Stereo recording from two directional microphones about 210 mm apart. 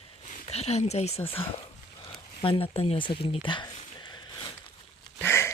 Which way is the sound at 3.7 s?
25° left (ahead or behind).